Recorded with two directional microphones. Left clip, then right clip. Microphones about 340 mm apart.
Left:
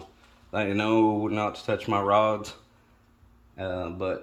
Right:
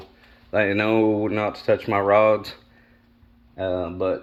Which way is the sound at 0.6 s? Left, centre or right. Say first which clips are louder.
Right 3 dB; centre.